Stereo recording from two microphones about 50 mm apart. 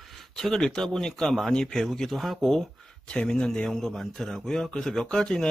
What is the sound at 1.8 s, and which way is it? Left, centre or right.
Speech, centre.